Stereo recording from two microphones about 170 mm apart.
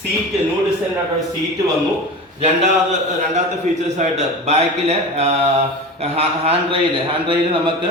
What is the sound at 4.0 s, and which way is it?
Speech, 40° right (ahead or behind).